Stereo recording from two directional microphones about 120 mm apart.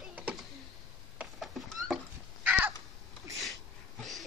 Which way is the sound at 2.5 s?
10° right (ahead or behind).